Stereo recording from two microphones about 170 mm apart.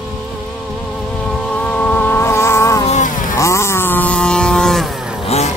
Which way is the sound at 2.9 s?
50° left (ahead or behind).